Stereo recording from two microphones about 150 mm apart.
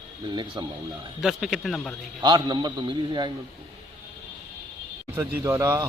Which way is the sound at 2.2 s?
30° right (ahead or behind).